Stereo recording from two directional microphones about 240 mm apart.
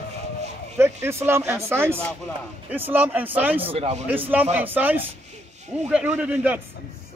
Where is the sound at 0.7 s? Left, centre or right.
Centre.